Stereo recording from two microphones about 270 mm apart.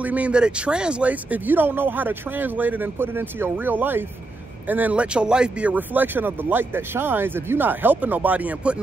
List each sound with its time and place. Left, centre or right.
0.0 s speech: centre